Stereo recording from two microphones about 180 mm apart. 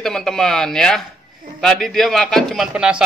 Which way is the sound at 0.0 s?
Centre (ahead or behind).